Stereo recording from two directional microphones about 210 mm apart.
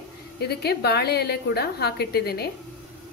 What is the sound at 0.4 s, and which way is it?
A woman's voice, 50° left (ahead or behind).